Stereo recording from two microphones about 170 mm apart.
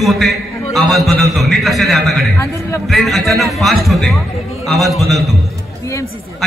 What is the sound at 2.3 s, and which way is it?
Speech, 15° left (ahead or behind).